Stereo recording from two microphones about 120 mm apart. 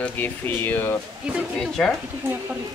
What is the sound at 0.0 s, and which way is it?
Speech, 15° left (ahead or behind).